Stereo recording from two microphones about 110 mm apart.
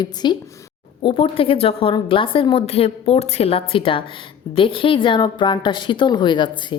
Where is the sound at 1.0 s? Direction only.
50° left (ahead or behind).